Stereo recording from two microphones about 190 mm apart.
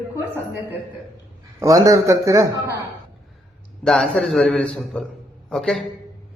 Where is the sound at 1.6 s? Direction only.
20° right (ahead or behind).